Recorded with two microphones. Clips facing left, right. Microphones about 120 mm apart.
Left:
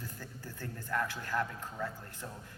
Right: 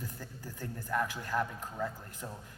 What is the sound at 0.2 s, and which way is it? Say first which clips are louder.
A man's voice: right 1 dB; 15° right (ahead or behind).